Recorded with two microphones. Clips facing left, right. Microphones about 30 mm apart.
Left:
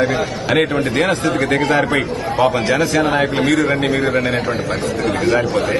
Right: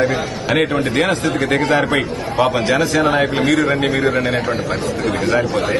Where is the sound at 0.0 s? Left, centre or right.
Centre.